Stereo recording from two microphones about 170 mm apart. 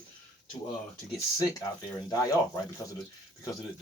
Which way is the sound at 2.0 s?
20° left (ahead or behind).